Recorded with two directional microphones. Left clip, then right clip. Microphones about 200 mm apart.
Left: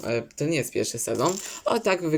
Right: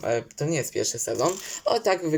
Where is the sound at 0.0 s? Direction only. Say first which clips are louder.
Right 1 dB; 10° left (ahead or behind).